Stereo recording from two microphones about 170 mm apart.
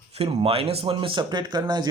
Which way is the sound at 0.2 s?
35° right (ahead or behind).